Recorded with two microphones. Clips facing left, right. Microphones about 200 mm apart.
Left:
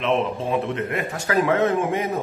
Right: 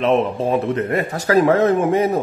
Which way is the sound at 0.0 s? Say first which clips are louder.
Right 5 dB; 40° right (ahead or behind).